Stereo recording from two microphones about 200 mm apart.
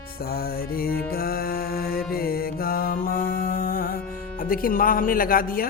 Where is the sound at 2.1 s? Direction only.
50° left (ahead or behind).